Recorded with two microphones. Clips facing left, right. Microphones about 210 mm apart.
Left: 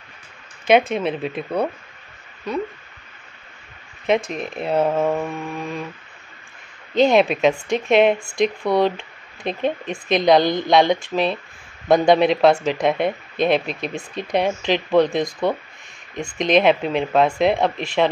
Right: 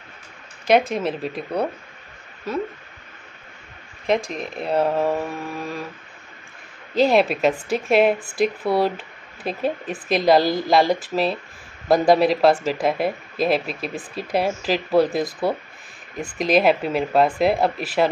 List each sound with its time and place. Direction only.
0.7 s speech: centre (ahead or behind)
4.0 s speech: centre (ahead or behind)
7.0 s speech: centre (ahead or behind)